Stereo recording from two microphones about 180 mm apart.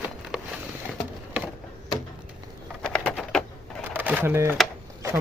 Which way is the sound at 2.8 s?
5° left (ahead or behind).